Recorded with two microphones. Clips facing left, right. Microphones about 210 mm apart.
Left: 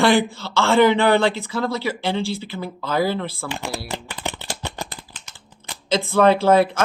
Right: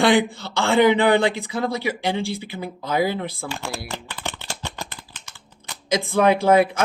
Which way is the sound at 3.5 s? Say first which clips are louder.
Left 2 dB; 15° left (ahead or behind).